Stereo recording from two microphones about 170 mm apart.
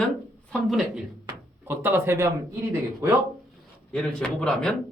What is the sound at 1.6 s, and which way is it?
Speech, 15° right (ahead or behind).